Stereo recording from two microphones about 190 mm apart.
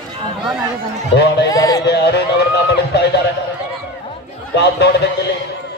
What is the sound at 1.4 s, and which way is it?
Speech, 20° left (ahead or behind).